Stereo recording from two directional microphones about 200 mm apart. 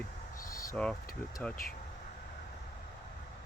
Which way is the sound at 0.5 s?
15° left (ahead or behind).